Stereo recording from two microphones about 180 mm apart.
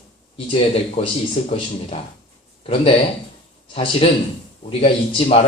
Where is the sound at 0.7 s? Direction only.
35° left (ahead or behind).